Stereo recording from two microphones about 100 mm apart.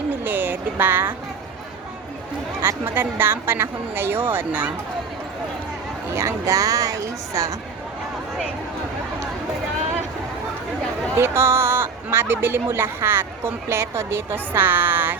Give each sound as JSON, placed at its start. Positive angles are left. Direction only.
{"t": 0.1, "sound": "speech", "side_deg": -20}
{"t": 2.6, "sound": "speech", "side_deg": -20}
{"t": 6.1, "sound": "a woman's voice", "side_deg": -30}
{"t": 11.1, "sound": "speech", "side_deg": -25}